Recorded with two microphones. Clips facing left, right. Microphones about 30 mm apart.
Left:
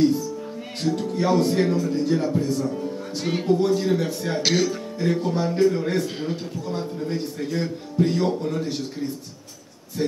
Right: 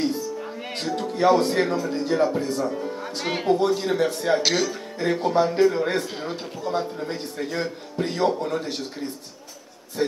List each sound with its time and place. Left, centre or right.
0.8 s speech: centre
3.5 s a man's voice: centre
4.4 s speech: centre
4.9 s a man's voice: right